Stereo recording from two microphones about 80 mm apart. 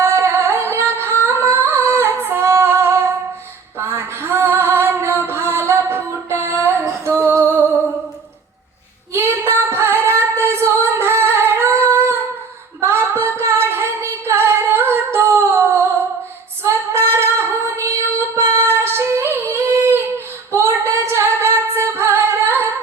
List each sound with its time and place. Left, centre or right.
0.0 s music: right
1.5 s singing: right
3.8 s female singing: right
5.2 s music: right
9.1 s female singing: right
12.8 s singing: right
16.6 s female singing: right